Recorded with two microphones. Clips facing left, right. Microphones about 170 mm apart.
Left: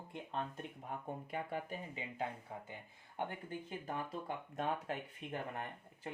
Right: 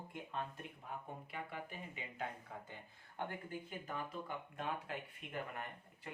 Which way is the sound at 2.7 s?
20° left (ahead or behind).